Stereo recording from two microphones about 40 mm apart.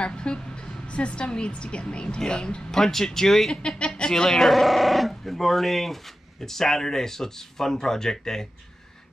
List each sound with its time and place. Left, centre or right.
0.0 s speech: left
2.8 s speech: centre
3.6 s a woman's voice: left
4.4 s speech: centre